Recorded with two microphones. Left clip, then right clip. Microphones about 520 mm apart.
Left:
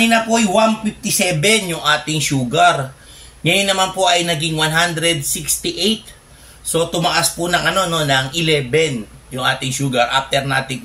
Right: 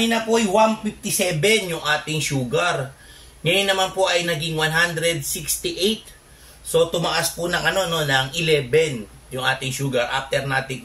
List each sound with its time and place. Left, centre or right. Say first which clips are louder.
0.0 s a man's voice: left 5 dB; right